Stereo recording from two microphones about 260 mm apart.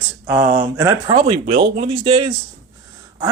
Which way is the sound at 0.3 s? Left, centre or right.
Centre.